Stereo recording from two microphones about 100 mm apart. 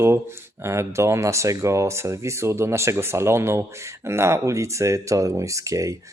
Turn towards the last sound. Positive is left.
turn(degrees=-35)  # may be behind; listen again after turning